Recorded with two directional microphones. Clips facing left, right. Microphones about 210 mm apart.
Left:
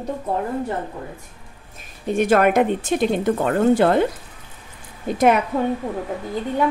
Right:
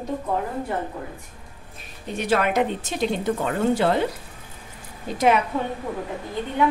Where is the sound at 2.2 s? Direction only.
50° left (ahead or behind).